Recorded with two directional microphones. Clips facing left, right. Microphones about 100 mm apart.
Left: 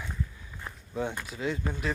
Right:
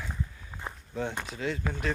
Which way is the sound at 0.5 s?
35° right (ahead or behind).